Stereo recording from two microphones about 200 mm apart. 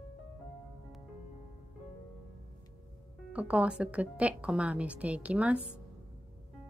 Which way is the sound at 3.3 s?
5° right (ahead or behind).